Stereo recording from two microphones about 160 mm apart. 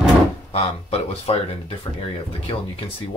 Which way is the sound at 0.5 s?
40° left (ahead or behind).